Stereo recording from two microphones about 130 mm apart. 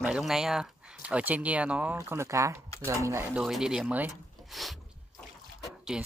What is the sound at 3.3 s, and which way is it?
Speech, 5° right (ahead or behind).